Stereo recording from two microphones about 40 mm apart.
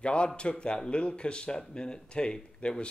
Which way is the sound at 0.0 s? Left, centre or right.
Left.